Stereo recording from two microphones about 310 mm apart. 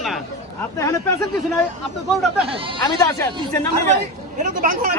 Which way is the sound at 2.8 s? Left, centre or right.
Centre.